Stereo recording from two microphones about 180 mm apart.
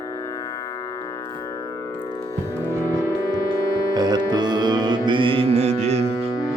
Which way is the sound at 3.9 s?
20° right (ahead or behind).